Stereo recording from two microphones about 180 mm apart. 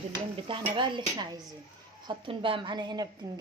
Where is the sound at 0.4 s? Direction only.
30° right (ahead or behind).